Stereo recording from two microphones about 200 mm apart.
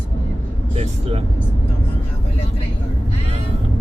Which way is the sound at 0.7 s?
30° right (ahead or behind).